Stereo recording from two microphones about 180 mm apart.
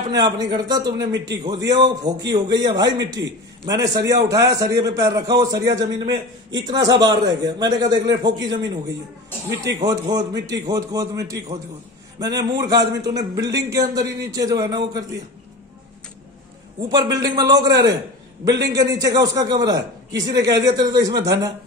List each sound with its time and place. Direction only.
0.1 s a man's voice: 20° right (ahead or behind)
9.8 s a man's voice: 20° right (ahead or behind)
16.9 s a man's voice: 20° right (ahead or behind)